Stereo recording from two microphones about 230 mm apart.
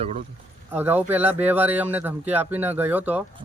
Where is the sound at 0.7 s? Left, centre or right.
Centre.